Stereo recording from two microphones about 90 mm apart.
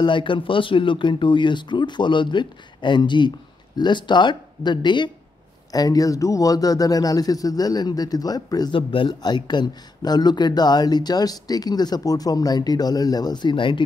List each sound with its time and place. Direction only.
0.0 s speech: 65° left (ahead or behind)
5.7 s speech: 45° left (ahead or behind)
8.7 s speech: 75° left (ahead or behind)
9.2 s speech: 55° left (ahead or behind)